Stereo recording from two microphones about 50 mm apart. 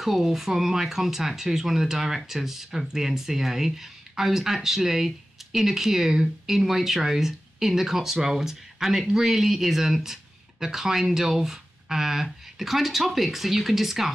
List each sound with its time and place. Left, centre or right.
0.0 s speech: centre